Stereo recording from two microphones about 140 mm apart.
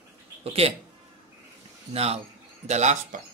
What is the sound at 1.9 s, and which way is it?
A man's voice, 45° right (ahead or behind).